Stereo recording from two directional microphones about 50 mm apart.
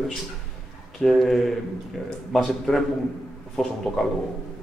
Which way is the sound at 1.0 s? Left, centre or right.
Centre.